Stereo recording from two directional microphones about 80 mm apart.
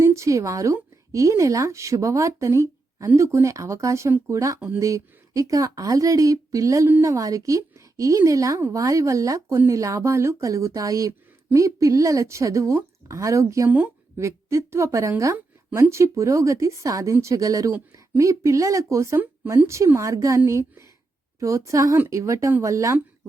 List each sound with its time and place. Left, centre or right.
0.0 s a woman's voice: right